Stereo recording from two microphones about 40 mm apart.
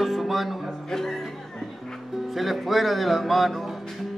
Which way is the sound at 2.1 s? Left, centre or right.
Centre.